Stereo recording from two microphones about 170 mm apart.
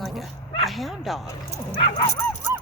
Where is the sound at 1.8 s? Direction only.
30° left (ahead or behind).